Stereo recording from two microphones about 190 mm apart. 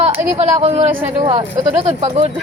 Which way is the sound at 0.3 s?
35° right (ahead or behind).